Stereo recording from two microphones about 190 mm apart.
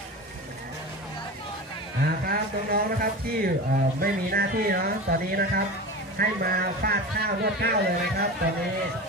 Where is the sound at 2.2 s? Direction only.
50° right (ahead or behind).